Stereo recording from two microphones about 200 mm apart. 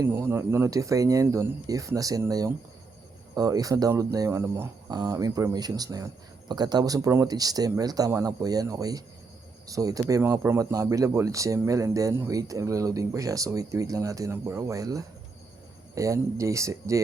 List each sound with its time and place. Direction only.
0.0 s speech: 10° right (ahead or behind)